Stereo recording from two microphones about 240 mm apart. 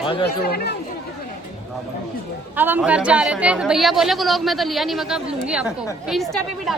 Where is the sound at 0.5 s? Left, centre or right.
Left.